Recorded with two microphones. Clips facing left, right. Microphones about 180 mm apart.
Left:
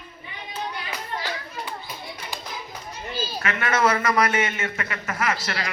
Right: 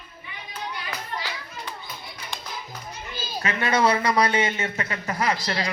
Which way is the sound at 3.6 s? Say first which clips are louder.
Right 1 dB; 15° right (ahead or behind).